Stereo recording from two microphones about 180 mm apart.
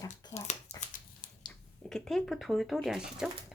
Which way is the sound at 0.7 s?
40° left (ahead or behind).